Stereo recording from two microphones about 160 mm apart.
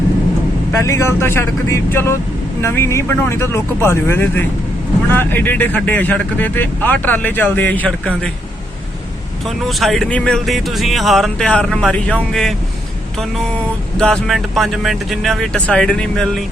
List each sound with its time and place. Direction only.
0.7 s speech: 15° left (ahead or behind)
9.6 s speech: centre (ahead or behind)
14.0 s speech: 5° left (ahead or behind)